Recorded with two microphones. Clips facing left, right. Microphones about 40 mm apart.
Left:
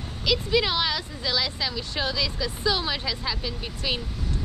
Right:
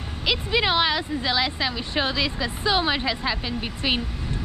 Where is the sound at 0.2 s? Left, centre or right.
Right.